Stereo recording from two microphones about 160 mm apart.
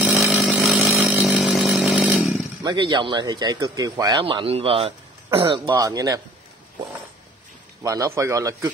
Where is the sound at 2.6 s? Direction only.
30° right (ahead or behind).